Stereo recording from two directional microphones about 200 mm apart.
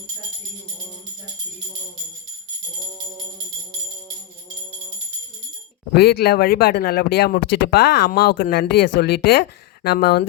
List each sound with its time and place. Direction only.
5.9 s speech: 50° left (ahead or behind)